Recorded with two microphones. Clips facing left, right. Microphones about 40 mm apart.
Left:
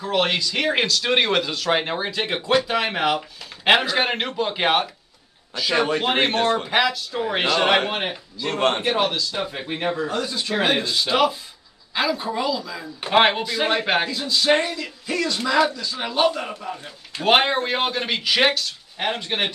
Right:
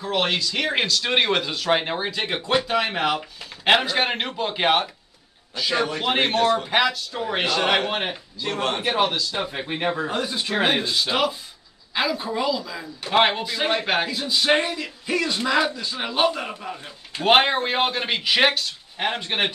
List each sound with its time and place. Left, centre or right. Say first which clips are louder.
0.0 s speech: left 2 dB; centre
6.3 s speech: right 1 dB; left
6.7 s speech: left 1 dB; centre
7.6 s a man's voice: left 3 dB; centre
7.9 s speech: even; centre
8.5 s speech: left 4 dB; left
8.8 s a man's voice: even; centre
9.9 s speech: even; right
10.5 s speech: left 1 dB; centre
13.1 s speech: left 2 dB; centre
14.0 s a man's voice: left 1 dB; centre
16.3 s a man's voice: left 2 dB; centre